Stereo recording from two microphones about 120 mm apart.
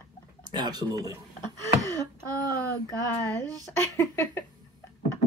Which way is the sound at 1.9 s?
30° right (ahead or behind).